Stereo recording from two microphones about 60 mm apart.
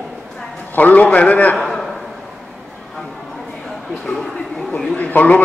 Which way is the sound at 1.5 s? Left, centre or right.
Centre.